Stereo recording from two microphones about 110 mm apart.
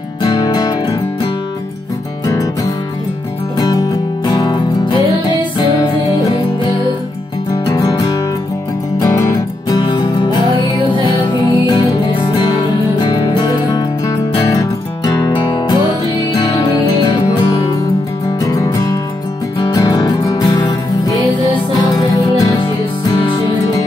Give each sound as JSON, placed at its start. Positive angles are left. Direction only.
{"t": 0.2, "sound": "music", "side_deg": 40}
{"t": 4.3, "sound": "music", "side_deg": 40}
{"t": 7.6, "sound": "music", "side_deg": 35}
{"t": 9.8, "sound": "music", "side_deg": 45}
{"t": 18.4, "sound": "music", "side_deg": 30}